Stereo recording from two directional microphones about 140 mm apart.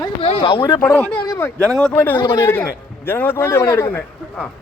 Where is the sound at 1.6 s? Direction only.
25° right (ahead or behind).